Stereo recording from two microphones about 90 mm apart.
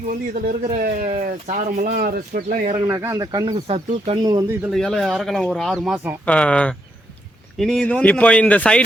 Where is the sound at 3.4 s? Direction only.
90° right.